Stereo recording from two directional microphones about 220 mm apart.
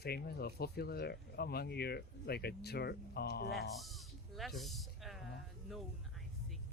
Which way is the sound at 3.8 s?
Centre (ahead or behind).